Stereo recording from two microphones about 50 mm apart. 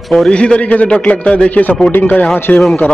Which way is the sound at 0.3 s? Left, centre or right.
Left.